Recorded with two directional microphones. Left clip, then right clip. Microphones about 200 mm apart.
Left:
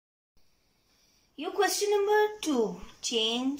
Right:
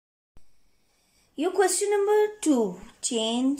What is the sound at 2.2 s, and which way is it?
A woman's voice, 35° right (ahead or behind).